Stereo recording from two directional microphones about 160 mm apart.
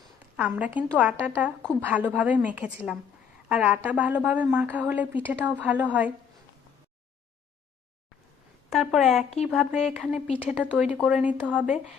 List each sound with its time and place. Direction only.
0.3 s a woman's voice: 10° right (ahead or behind)
8.7 s speech: centre (ahead or behind)
10.2 s speech: 35° left (ahead or behind)
10.5 s a woman's voice: 5° right (ahead or behind)